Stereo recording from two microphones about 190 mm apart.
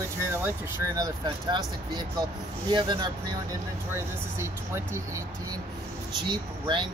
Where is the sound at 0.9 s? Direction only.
20° right (ahead or behind).